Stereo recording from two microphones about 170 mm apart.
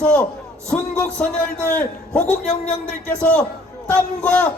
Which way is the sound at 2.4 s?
45° left (ahead or behind).